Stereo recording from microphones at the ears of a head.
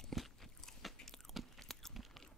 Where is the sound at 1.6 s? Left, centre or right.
Centre.